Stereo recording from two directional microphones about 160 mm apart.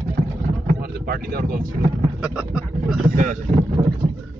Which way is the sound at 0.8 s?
70° right (ahead or behind).